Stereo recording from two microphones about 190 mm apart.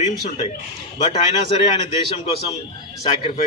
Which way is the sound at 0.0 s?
30° left (ahead or behind).